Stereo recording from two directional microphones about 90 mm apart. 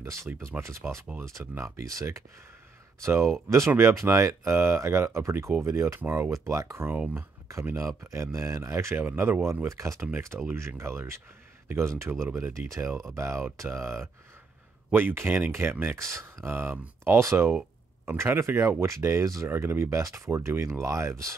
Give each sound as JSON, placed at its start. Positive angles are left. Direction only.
{"t": 0.0, "sound": "speech", "side_deg": -30}
{"t": 6.9, "sound": "speech", "side_deg": -20}
{"t": 7.6, "sound": "speech", "side_deg": -35}